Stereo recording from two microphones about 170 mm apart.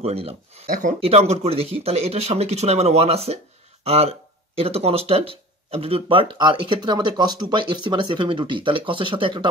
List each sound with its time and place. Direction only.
0.0 s speech: 35° right (ahead or behind)
0.7 s speech: 50° right (ahead or behind)
1.0 s speech: 35° right (ahead or behind)